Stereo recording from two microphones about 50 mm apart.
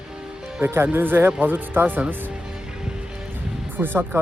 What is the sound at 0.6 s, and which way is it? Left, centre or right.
Speech, right.